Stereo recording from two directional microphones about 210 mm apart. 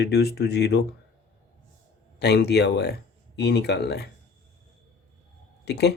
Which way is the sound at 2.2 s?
50° left (ahead or behind).